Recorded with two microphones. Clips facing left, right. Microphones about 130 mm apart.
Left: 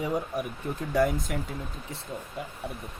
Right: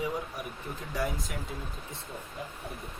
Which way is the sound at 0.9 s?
50° left (ahead or behind).